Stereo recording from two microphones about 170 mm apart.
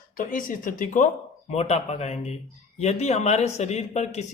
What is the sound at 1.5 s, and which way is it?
Speech, 40° left (ahead or behind).